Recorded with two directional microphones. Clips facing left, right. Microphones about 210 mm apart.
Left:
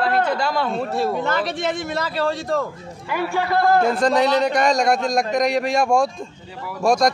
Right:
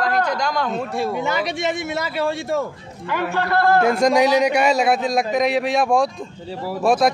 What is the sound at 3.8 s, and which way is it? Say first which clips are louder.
A man's voice: right 2 dB; 10° right (ahead or behind).